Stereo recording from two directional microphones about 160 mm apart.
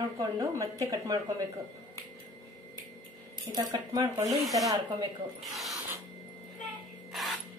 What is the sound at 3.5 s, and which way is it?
Speech, 25° right (ahead or behind).